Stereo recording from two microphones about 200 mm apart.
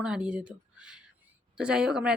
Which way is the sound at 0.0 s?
5° right (ahead or behind).